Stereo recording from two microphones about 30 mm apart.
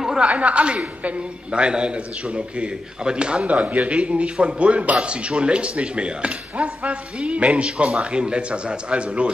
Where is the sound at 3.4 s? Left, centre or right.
Right.